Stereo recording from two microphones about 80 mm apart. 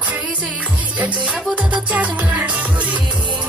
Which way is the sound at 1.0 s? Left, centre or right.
Centre.